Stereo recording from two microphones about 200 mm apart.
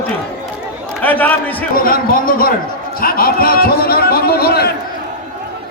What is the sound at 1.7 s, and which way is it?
A man's voice, 45° left (ahead or behind).